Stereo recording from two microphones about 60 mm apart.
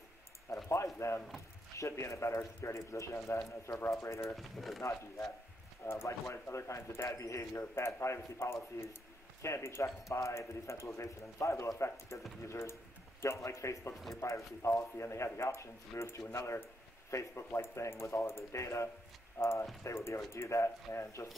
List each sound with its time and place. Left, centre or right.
0.5 s a sound: left
0.9 s a man's voice: left
4.4 s speech: centre
5.8 s a man's voice: left
7.1 s a man's voice: left
12.4 s a man's voice: left